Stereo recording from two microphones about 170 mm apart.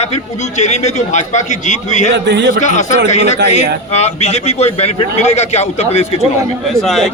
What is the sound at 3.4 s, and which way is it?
Speech, 75° right (ahead or behind).